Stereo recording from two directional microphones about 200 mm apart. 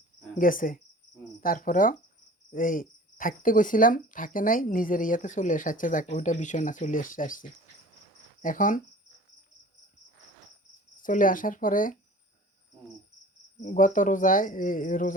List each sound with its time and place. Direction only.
0.3 s cricket: 45° left (ahead or behind)
8.4 s speech: 40° left (ahead or behind)
11.0 s cricket: 40° left (ahead or behind)
13.6 s speech: 40° left (ahead or behind)